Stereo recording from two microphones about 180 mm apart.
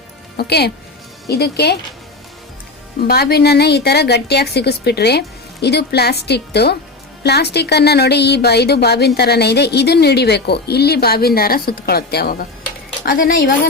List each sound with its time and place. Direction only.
0.3 s a woman's voice: 65° left (ahead or behind)
3.0 s a woman's voice: 60° left (ahead or behind)